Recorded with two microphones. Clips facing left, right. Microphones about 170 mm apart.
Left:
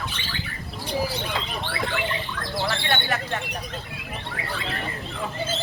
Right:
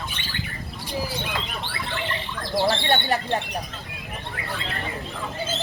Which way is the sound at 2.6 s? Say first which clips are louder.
Right 5 dB; 35° right (ahead or behind).